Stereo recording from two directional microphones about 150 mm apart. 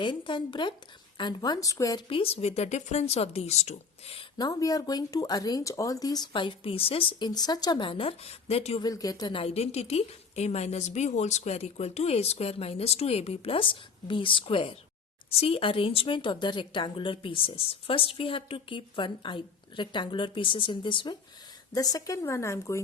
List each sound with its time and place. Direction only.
0.0 s speech: 30° left (ahead or behind)
2.0 s a woman's voice: 40° left (ahead or behind)
4.4 s speech: 25° left (ahead or behind); by 8.8 s 40° left (ahead or behind)
8.8 s a woman's voice: 25° left (ahead or behind)